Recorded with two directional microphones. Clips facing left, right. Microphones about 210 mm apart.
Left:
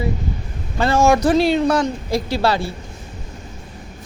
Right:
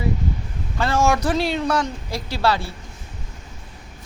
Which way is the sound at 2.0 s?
45° left (ahead or behind).